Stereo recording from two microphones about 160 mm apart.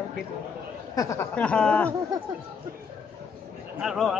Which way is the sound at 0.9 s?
20° left (ahead or behind).